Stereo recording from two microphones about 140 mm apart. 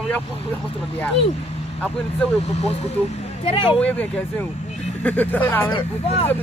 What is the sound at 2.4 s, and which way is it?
Speech, 50° left (ahead or behind).